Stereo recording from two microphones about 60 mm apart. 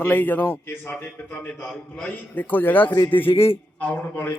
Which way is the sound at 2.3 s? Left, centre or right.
Left.